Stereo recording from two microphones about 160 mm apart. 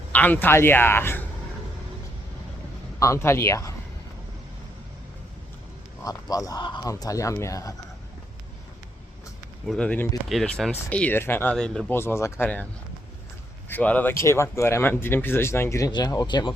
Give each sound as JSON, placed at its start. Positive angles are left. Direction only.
{"t": 0.1, "sound": "speech", "side_deg": 10}
{"t": 3.0, "sound": "speech", "side_deg": 15}
{"t": 6.1, "sound": "speech", "side_deg": 20}
{"t": 9.6, "sound": "speech", "side_deg": 5}
{"t": 11.9, "sound": "speech", "side_deg": 15}
{"t": 13.7, "sound": "speech", "side_deg": 10}